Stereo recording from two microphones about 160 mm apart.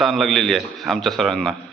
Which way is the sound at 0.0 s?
Centre (ahead or behind).